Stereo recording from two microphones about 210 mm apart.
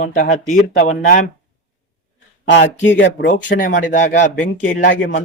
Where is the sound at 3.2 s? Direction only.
40° left (ahead or behind).